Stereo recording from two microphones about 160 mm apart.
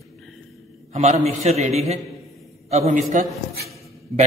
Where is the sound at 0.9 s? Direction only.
45° right (ahead or behind).